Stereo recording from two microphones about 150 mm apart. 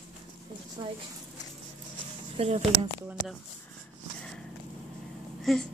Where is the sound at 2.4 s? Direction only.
45° right (ahead or behind).